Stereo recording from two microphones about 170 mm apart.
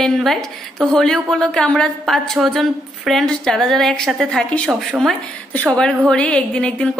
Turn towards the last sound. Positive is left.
turn(degrees=5)  # may be behind; listen again after turning